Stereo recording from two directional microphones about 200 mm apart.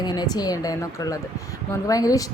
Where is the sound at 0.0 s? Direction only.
20° left (ahead or behind).